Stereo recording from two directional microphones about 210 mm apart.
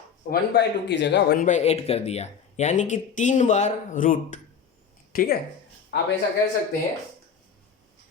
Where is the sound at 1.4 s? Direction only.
35° left (ahead or behind).